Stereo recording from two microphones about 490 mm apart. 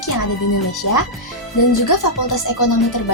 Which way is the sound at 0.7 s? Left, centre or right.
Left.